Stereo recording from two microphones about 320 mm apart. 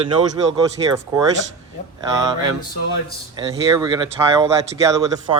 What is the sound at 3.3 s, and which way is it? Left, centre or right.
Speech, centre.